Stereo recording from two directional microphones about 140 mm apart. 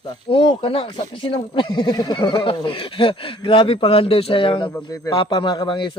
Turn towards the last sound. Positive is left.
turn(degrees=35)  # may be behind; listen again after turning